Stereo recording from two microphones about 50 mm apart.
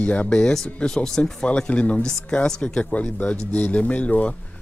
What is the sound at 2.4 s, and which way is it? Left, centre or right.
Speech, centre.